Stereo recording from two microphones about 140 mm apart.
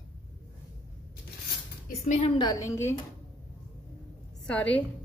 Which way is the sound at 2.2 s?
30° left (ahead or behind).